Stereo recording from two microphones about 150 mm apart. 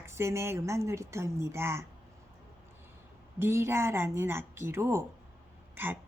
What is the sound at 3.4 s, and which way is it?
A woman's voice, 15° right (ahead or behind).